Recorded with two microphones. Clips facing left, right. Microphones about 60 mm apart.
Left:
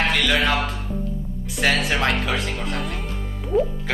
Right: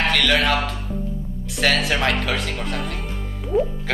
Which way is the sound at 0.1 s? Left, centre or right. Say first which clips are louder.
Right 2 dB; centre.